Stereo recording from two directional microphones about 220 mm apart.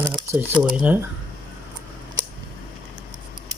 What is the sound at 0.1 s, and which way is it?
Crumpling, 20° right (ahead or behind).